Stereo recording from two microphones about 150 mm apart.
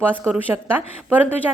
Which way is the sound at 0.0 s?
10° right (ahead or behind).